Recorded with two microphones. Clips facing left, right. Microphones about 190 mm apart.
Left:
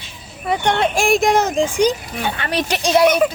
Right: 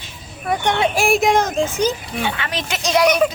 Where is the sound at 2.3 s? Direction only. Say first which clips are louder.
Left 5 dB; 40° left (ahead or behind).